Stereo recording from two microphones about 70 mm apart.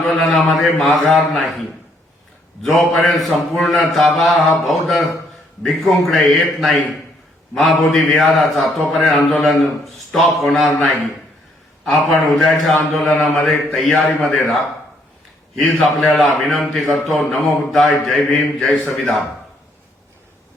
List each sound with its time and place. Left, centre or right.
0.1 s speech: centre
2.6 s speech: centre
11.9 s speech: centre